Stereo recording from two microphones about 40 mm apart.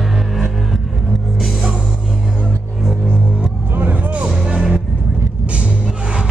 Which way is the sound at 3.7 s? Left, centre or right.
Right.